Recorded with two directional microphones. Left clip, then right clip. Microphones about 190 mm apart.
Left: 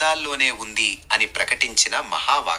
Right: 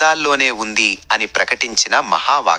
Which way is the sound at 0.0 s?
45° right (ahead or behind).